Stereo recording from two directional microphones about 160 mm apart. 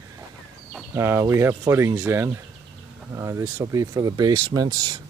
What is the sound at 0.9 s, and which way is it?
Speech, 20° right (ahead or behind).